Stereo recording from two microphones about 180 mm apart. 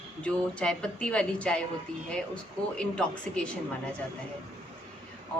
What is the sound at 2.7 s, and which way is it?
Speech, 5° left (ahead or behind).